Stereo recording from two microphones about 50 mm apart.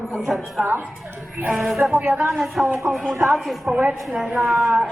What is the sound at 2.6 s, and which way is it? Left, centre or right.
Speech, centre.